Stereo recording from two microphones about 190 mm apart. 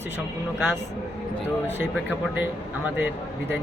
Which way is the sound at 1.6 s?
10° right (ahead or behind).